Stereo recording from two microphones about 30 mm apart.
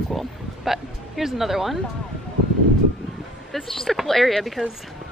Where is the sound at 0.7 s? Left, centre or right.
Centre.